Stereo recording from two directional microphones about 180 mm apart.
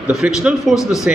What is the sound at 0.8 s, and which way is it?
Speech, 15° left (ahead or behind).